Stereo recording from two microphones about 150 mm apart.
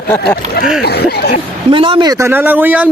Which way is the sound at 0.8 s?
90° left.